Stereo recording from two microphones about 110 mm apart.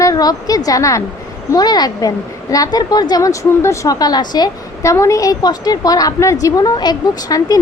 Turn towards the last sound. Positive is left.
turn(degrees=40)  # may be behind; listen again after turning